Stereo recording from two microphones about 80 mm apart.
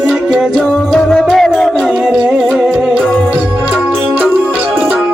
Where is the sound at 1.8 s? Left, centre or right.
Centre.